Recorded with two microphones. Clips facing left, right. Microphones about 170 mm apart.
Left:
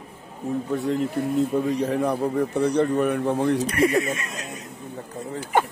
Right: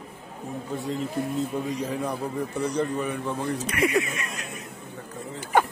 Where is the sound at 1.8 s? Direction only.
65° left (ahead or behind).